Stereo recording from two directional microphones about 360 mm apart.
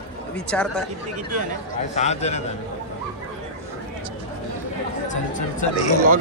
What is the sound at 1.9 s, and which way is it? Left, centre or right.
Speech, centre.